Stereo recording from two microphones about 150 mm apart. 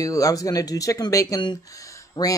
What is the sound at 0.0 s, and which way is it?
Speech, 25° left (ahead or behind).